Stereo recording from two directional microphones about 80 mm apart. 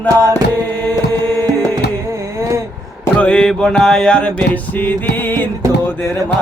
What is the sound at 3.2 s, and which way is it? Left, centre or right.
Music, centre.